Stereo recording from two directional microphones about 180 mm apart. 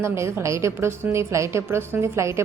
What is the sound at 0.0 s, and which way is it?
A woman's voice, 15° right (ahead or behind).